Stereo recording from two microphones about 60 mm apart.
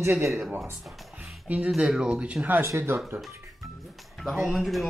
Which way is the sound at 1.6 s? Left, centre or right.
Centre.